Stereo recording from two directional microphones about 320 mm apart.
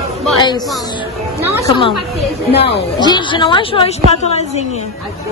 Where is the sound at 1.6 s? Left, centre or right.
Centre.